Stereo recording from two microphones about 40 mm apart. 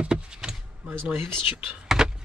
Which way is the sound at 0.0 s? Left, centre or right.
Right.